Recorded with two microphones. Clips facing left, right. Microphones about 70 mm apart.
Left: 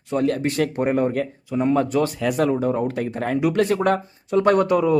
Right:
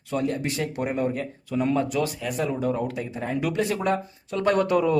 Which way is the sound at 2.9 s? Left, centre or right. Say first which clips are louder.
Left 6 dB; left.